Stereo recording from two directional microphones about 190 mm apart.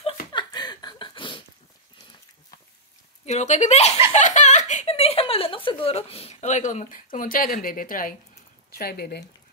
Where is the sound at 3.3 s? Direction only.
35° left (ahead or behind).